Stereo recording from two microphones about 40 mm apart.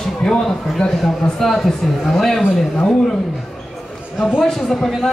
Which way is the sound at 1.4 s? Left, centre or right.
Centre.